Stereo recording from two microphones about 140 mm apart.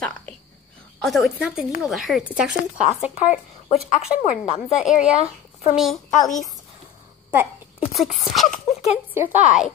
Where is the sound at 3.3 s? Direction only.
50° left (ahead or behind).